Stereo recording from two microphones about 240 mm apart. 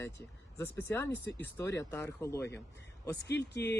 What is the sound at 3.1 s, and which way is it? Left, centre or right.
Speech, left.